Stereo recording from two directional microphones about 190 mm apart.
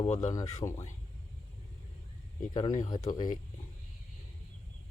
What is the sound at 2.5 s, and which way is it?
Speech, 20° left (ahead or behind).